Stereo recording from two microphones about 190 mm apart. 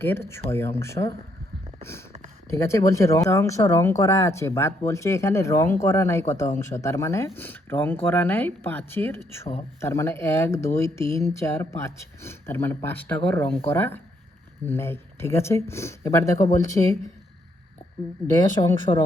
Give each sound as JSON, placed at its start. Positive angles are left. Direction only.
{"t": 0.0, "sound": "speech", "side_deg": 10}
{"t": 1.8, "sound": "a sound", "side_deg": 15}
{"t": 2.5, "sound": "speech", "side_deg": 15}
{"t": 18.6, "sound": "speech", "side_deg": 25}